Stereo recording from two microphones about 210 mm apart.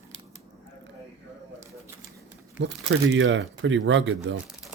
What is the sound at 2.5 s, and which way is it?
Speech, 60° right (ahead or behind).